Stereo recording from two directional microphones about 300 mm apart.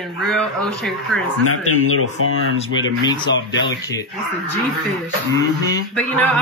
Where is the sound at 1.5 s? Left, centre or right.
Left.